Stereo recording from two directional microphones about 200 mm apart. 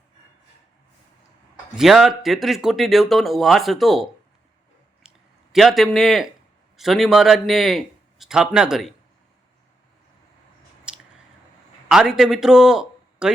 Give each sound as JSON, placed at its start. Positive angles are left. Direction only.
{"t": 1.7, "sound": "speech", "side_deg": 0}
{"t": 5.0, "sound": "a sound", "side_deg": 0}
{"t": 6.7, "sound": "speech", "side_deg": 0}
{"t": 10.9, "sound": "chewing", "side_deg": -5}
{"t": 11.9, "sound": "a man's voice", "side_deg": -5}